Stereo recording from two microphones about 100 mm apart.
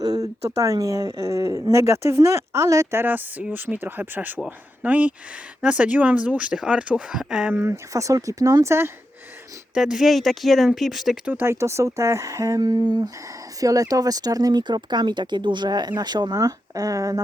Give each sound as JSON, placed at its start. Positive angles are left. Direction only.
{"t": 0.0, "sound": "speech", "side_deg": -40}
{"t": 7.5, "sound": "speech", "side_deg": -25}
{"t": 9.7, "sound": "speech", "side_deg": -5}
{"t": 11.3, "sound": "speech", "side_deg": -20}
{"t": 16.4, "sound": "speech", "side_deg": -35}